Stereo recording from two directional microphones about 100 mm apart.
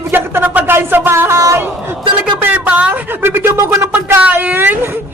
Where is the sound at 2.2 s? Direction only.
15° right (ahead or behind).